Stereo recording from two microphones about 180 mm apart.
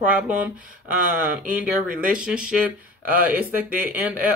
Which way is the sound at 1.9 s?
50° right (ahead or behind).